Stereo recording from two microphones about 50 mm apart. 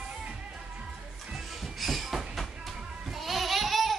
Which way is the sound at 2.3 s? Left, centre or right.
Centre.